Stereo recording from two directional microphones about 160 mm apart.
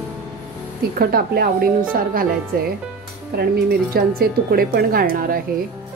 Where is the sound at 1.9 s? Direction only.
60° right (ahead or behind).